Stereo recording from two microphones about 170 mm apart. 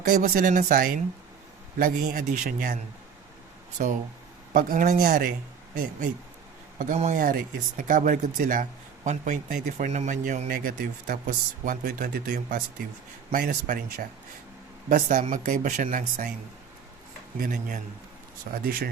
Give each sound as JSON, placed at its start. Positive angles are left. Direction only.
{"t": 0.1, "sound": "a man's voice", "side_deg": -50}
{"t": 3.8, "sound": "a man's voice", "side_deg": -55}
{"t": 13.3, "sound": "speech", "side_deg": -60}
{"t": 14.8, "sound": "a man's voice", "side_deg": -50}
{"t": 17.4, "sound": "speech", "side_deg": -55}